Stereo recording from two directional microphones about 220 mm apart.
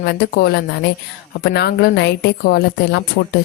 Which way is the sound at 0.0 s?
45° left (ahead or behind).